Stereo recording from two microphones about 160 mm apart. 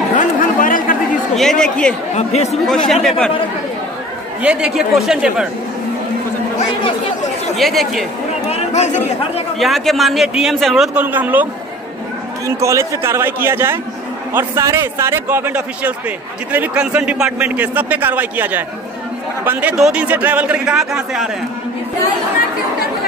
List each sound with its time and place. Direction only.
0.1 s chatter: 55° left (ahead or behind)
1.6 s speech: 5° left (ahead or behind)
2.1 s speech: 45° left (ahead or behind)
2.9 s a man's voice: 5° left (ahead or behind)
4.4 s a man's voice: 5° right (ahead or behind)
7.5 s a man's voice: centre (ahead or behind)
8.5 s speech: 45° left (ahead or behind)
9.6 s a man's voice: centre (ahead or behind)
11.0 s a man's voice: 10° right (ahead or behind)
12.4 s a man's voice: 20° right (ahead or behind)